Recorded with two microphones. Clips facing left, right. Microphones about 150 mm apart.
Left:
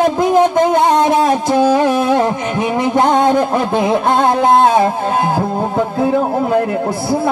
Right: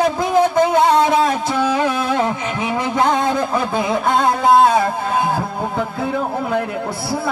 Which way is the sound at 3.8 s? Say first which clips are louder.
Left 3 dB; 50° left (ahead or behind).